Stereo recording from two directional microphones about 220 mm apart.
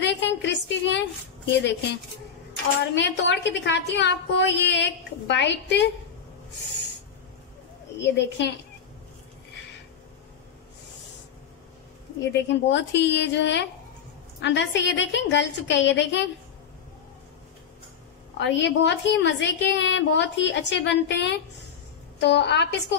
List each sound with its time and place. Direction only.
0.0 s a sound: 55° left (ahead or behind)
2.9 s a woman's voice: 55° left (ahead or behind)
8.0 s a woman's voice: 55° left (ahead or behind)
12.2 s a woman's voice: 55° left (ahead or behind)
18.4 s a woman's voice: 55° left (ahead or behind)